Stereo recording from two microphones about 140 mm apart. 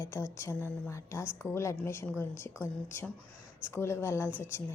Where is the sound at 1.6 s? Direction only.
20° left (ahead or behind).